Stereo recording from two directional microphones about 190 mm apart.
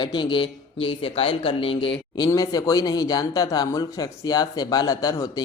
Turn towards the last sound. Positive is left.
turn(degrees=20)  # may be behind; listen again after turning